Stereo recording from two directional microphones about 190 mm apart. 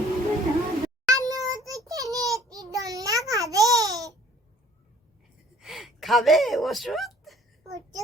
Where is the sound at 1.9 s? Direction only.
15° right (ahead or behind).